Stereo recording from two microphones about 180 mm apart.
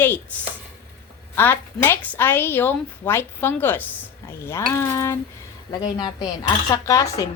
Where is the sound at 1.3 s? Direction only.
10° left (ahead or behind).